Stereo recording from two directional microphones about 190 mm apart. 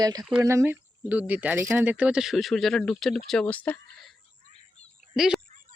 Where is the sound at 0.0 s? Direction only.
20° right (ahead or behind); by 5.4 s 5° right (ahead or behind).